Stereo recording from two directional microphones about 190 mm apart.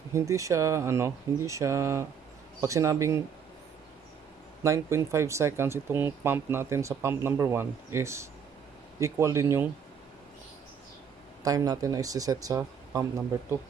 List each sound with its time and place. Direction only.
0.1 s speech: 15° right (ahead or behind)
4.6 s speech: 15° right (ahead or behind)
11.4 s speech: 20° right (ahead or behind)